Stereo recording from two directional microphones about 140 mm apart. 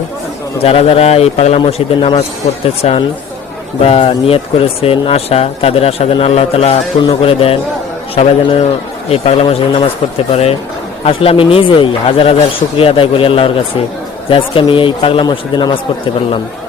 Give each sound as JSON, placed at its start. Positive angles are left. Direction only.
{"t": 0.6, "sound": "speech", "side_deg": 45}
{"t": 11.0, "sound": "speech", "side_deg": 40}